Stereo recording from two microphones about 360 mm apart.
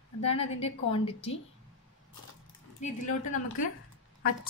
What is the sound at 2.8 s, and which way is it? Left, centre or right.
Speech, left.